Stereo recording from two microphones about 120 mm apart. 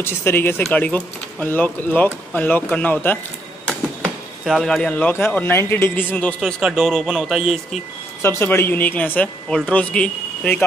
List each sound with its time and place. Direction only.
0.0 s speech: 20° left (ahead or behind)
3.6 s speech: 5° left (ahead or behind)
6.4 s speech: centre (ahead or behind)
8.2 s speech: 20° left (ahead or behind)